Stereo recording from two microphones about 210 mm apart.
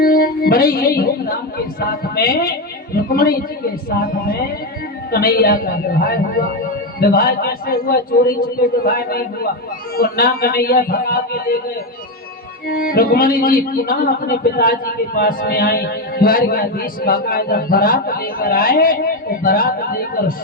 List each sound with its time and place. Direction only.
0.0 s speech: 45° left (ahead or behind)
12.6 s speech: 45° left (ahead or behind)